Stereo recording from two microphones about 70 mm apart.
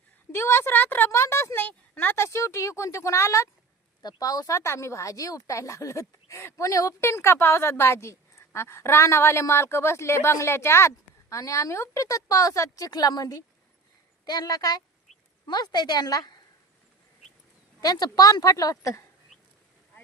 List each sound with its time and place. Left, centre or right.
0.3 s a woman's voice: left
4.0 s speech: left
4.5 s a woman's voice: left
7.0 s a woman's voice: left
15.4 s a woman's voice: left
17.7 s speech: left